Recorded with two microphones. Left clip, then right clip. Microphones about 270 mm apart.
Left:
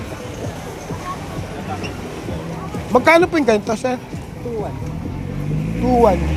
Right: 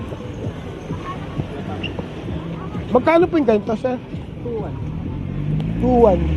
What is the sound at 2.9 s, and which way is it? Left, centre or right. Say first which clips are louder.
Speech: left 2 dB; left.